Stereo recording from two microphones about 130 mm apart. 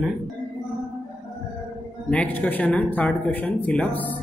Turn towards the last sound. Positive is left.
turn(degrees=10)  # may be behind; listen again after turning